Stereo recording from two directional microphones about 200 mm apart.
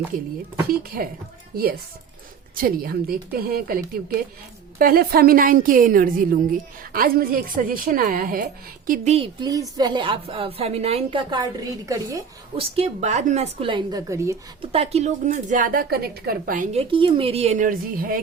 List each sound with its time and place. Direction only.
0.7 s a woman's voice: 50° right (ahead or behind)
2.6 s a woman's voice: 45° right (ahead or behind)
8.9 s a woman's voice: 30° right (ahead or behind); by 12.2 s 15° right (ahead or behind)
12.5 s a woman's voice: 30° right (ahead or behind)
14.6 s a woman's voice: 30° right (ahead or behind); by 16.6 s 45° right (ahead or behind)
16.7 s speech: 25° right (ahead or behind); by 18.2 s 45° right (ahead or behind)